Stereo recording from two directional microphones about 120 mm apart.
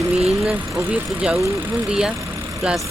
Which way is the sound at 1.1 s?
5° right (ahead or behind).